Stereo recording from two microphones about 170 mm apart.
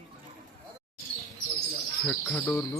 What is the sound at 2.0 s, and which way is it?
Speech, 10° left (ahead or behind).